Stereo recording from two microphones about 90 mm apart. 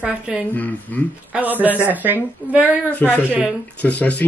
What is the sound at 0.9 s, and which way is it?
Speech, 15° left (ahead or behind).